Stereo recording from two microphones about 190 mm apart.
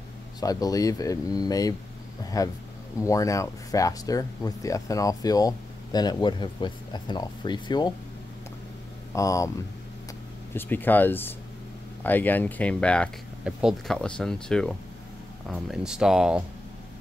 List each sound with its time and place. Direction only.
0.4 s speech: 20° left (ahead or behind)
9.1 s speech: 15° left (ahead or behind)
10.5 s speech: 10° left (ahead or behind)